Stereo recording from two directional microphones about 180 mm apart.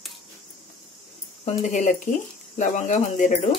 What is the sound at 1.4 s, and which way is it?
Speech, 40° left (ahead or behind).